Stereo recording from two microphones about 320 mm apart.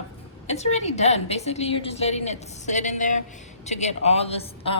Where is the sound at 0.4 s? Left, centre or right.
Centre.